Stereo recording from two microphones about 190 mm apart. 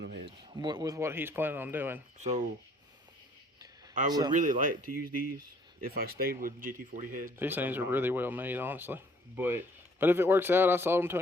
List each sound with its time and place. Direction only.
0.3 s speech: 25° right (ahead or behind)
2.1 s speech: 35° right (ahead or behind)
4.3 s speech: 45° right (ahead or behind)
7.3 s speech: 10° right (ahead or behind)